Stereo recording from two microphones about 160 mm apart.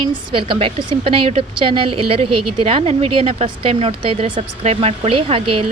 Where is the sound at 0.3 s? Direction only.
35° right (ahead or behind).